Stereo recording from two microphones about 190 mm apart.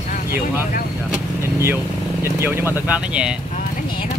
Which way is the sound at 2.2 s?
10° right (ahead or behind).